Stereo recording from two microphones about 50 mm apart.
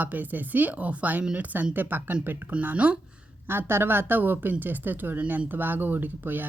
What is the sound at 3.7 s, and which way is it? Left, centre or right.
A woman's voice, right.